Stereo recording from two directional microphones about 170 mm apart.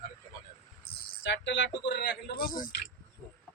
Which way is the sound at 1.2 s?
90° left.